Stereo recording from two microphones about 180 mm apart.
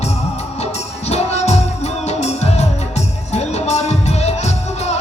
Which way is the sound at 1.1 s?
35° left (ahead or behind).